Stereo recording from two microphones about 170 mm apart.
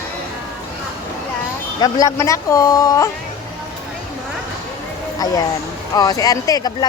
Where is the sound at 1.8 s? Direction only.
20° left (ahead or behind).